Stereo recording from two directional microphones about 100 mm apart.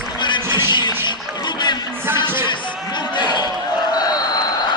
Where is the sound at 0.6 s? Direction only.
50° left (ahead or behind).